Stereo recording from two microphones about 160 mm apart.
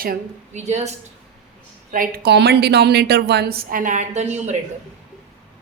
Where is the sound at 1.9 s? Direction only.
60° right (ahead or behind).